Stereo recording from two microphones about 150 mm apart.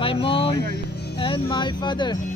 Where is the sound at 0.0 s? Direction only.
35° left (ahead or behind).